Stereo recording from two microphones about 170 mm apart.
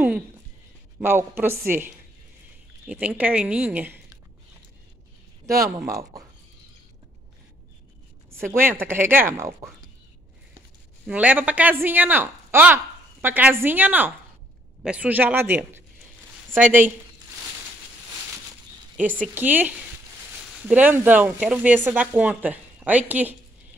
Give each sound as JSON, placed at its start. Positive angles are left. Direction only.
{"t": 0.9, "sound": "speech", "side_deg": -15}
{"t": 2.9, "sound": "speech", "side_deg": -10}
{"t": 5.9, "sound": "speech", "side_deg": -20}
{"t": 8.5, "sound": "speech", "side_deg": -15}
{"t": 11.1, "sound": "speech", "side_deg": -10}
{"t": 18.9, "sound": "speech", "side_deg": -50}
{"t": 19.3, "sound": "speech", "side_deg": -10}